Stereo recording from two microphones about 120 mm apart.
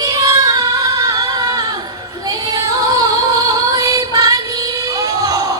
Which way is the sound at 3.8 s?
30° right (ahead or behind).